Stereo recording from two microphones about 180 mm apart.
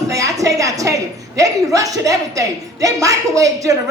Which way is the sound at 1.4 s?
20° right (ahead or behind).